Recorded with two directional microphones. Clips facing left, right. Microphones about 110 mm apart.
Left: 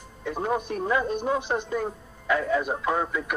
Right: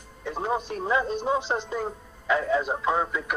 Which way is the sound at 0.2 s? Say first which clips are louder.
Left 1 dB; 20° right (ahead or behind).